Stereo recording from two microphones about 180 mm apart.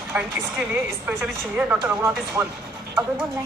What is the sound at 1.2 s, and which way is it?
Speech, 10° right (ahead or behind).